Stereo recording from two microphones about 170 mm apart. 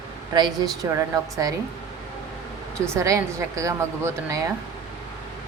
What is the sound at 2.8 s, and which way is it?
A woman's voice, 20° right (ahead or behind).